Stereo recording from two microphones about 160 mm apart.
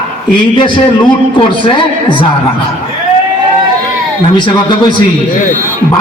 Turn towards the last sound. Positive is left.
turn(degrees=30)  # may be behind; listen again after turning